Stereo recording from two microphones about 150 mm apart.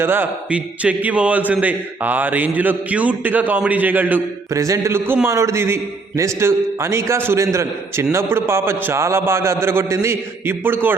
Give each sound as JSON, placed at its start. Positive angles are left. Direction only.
{"t": 0.0, "sound": "a man's voice", "side_deg": -15}